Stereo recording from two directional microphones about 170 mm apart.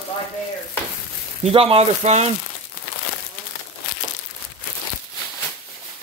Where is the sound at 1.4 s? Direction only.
35° right (ahead or behind).